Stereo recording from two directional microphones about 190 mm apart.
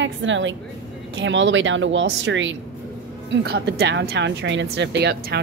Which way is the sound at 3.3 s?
65° right (ahead or behind).